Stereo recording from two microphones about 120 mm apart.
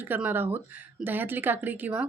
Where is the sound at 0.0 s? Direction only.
15° right (ahead or behind).